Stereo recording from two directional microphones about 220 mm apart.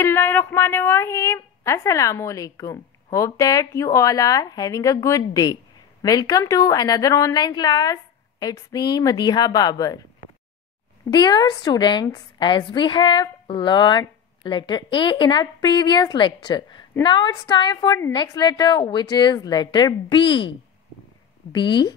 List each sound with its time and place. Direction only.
0.0 s a woman's voice: 10° left (ahead or behind)